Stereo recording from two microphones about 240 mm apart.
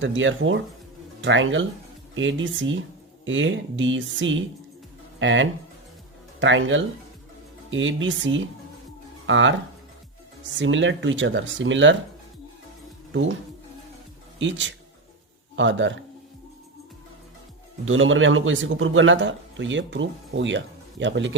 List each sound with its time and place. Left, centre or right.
0.0 s a man's voice: right
14.3 s a man's voice: right
17.8 s a man's voice: right